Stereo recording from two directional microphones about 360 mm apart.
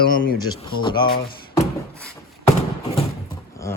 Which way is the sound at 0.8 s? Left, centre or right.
Centre.